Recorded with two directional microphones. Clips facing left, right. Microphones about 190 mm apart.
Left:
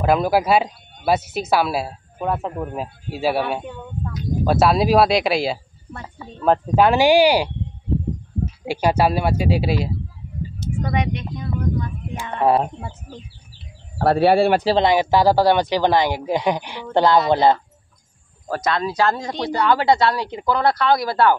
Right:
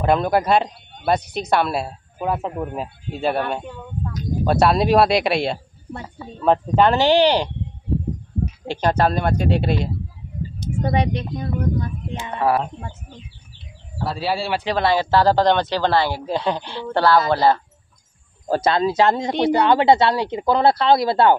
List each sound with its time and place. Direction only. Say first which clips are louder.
0.0 s speech: left 1 dB; 5° left (ahead or behind)
8.6 s speech: left 1 dB; 10° left (ahead or behind)
10.8 s speech: right 3 dB; 30° right (ahead or behind)
12.4 s speech: left 3 dB; 20° left (ahead or behind)
13.9 s speech: left 9 dB; 60° left (ahead or behind)
14.8 s speech: left 2 dB; 15° left (ahead or behind)
18.5 s speech: right 4 dB; 30° right (ahead or behind)